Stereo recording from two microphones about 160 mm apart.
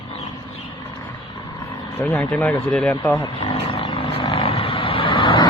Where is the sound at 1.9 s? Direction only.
10° left (ahead or behind).